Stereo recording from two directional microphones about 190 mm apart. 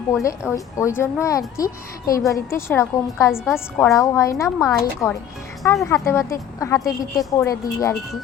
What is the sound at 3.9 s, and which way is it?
A woman's voice, 15° left (ahead or behind).